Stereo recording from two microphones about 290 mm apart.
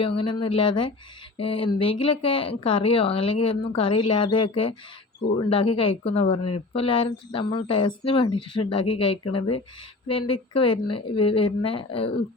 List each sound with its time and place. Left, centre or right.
0.0 s speech: centre